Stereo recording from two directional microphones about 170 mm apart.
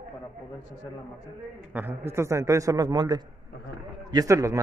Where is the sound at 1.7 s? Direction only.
10° right (ahead or behind).